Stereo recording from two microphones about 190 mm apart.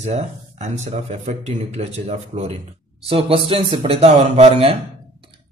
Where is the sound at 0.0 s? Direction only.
35° right (ahead or behind).